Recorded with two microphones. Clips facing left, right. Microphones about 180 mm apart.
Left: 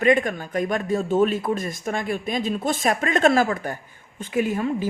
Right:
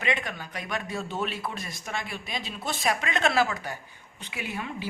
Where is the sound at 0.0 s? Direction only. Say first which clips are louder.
Left 11 dB; 45° left (ahead or behind).